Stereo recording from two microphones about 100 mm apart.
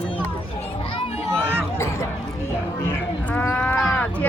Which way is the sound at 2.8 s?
20° left (ahead or behind).